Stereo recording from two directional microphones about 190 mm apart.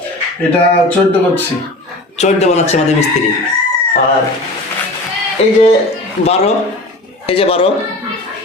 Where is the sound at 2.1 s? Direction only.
35° left (ahead or behind).